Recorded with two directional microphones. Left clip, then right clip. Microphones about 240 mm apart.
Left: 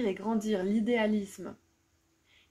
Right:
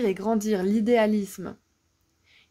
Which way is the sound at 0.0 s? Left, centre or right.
Right.